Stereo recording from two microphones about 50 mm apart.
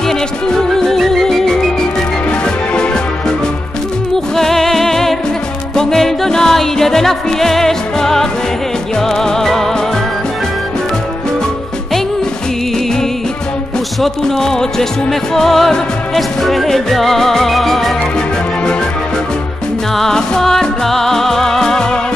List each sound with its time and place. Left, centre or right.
0.7 s music: centre
2.7 s music: centre
4.4 s music: centre
14.2 s music: centre
20.0 s music: centre